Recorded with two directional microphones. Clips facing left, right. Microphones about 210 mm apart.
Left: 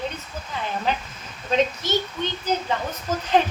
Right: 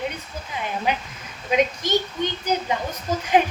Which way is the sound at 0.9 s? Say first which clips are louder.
Right 1 dB; 15° right (ahead or behind).